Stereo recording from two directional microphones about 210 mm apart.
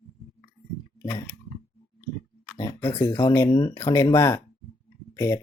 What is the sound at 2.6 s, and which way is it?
Speech, 15° left (ahead or behind).